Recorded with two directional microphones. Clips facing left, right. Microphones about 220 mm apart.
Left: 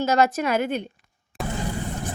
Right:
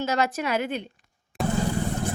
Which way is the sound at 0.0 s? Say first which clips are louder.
Left 5 dB; 45° left (ahead or behind).